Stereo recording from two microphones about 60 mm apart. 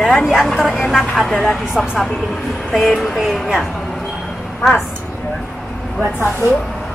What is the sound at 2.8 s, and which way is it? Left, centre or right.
Speech, centre.